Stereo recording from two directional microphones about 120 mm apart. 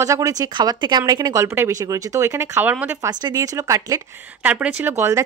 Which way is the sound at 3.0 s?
35° right (ahead or behind).